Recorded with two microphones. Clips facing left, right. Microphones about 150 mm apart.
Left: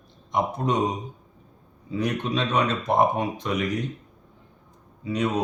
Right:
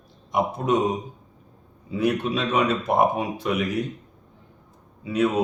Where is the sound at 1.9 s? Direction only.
5° right (ahead or behind).